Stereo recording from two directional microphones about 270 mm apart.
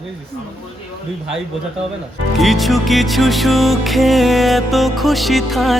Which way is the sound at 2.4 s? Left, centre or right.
Centre.